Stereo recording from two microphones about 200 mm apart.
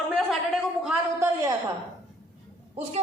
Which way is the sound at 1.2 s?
15° right (ahead or behind).